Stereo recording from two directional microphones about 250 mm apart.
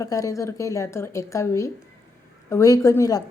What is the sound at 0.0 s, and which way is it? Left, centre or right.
A woman's voice, centre.